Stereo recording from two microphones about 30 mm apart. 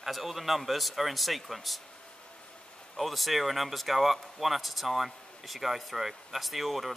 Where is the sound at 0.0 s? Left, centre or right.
Centre.